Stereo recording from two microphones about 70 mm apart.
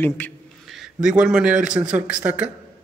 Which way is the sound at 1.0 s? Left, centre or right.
Centre.